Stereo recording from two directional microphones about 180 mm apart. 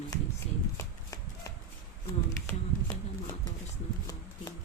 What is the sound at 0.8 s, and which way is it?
Shuffling cards, 20° left (ahead or behind).